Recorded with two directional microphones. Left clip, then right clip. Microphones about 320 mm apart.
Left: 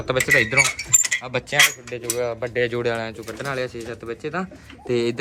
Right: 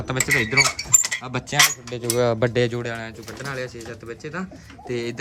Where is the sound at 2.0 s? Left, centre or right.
Centre.